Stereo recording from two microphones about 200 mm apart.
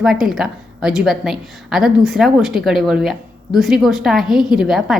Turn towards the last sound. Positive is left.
turn(degrees=0)  # may be behind; listen again after turning